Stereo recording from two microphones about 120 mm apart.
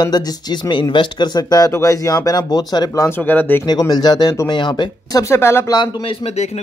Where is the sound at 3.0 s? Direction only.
15° left (ahead or behind).